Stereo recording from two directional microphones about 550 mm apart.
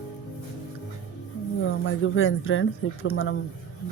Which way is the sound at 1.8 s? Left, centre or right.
Left.